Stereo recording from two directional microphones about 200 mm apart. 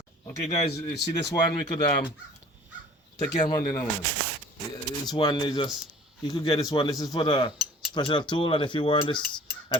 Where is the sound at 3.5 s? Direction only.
20° left (ahead or behind).